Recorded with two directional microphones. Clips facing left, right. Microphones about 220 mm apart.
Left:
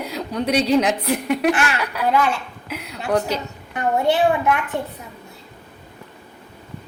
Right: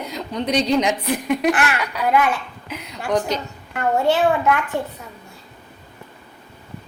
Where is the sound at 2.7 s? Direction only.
5° left (ahead or behind).